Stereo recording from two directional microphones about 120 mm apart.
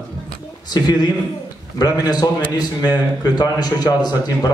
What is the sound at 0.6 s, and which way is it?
A man's voice, 35° left (ahead or behind).